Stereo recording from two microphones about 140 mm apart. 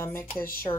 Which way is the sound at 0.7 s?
40° left (ahead or behind).